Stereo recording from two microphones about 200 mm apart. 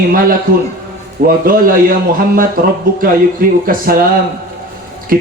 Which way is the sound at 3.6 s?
45° right (ahead or behind).